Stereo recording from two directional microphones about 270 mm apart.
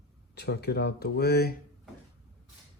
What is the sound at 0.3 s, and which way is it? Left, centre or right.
Speech, left.